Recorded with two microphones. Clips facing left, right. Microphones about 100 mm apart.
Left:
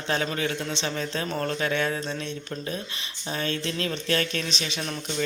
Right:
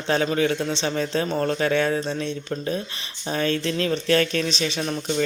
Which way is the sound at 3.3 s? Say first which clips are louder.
Right 6 dB; 40° right (ahead or behind).